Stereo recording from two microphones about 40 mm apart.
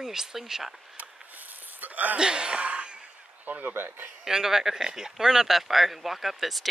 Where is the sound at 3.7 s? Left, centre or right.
Right.